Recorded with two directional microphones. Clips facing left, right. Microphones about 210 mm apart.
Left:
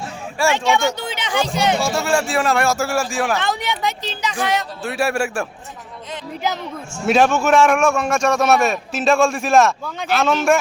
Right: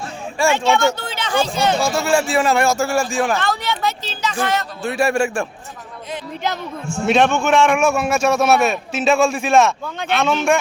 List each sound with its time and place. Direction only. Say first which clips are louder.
0.5 s speech: right 3 dB; 15° left (ahead or behind)
1.8 s a man's voice: right 2 dB; centre (ahead or behind)
3.3 s speech: right 1 dB; 20° left (ahead or behind)
4.8 s a man's voice: right 5 dB; 5° left (ahead or behind)
7.0 s a man's voice: even; centre (ahead or behind)